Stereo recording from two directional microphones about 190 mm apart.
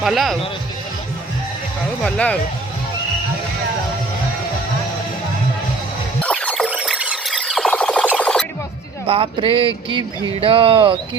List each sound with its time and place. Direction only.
0.0 s speech: centre (ahead or behind)
2.0 s speech: 5° left (ahead or behind)
6.2 s music: 5° left (ahead or behind)
6.7 s a sound: 5° right (ahead or behind)
8.2 s music: 5° left (ahead or behind)
9.0 s speech: 30° right (ahead or behind)